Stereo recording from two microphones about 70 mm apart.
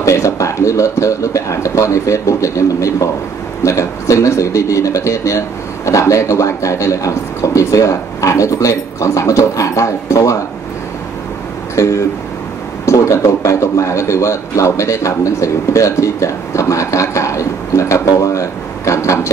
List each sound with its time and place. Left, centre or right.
0.0 s a sound: left
3.6 s a man's voice: left
11.7 s a man's voice: left